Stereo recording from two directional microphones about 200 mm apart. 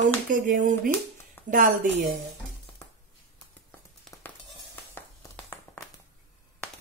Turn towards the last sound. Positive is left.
turn(degrees=10)  # may be behind; listen again after turning